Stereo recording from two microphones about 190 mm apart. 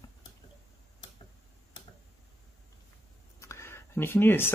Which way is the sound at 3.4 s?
15° left (ahead or behind).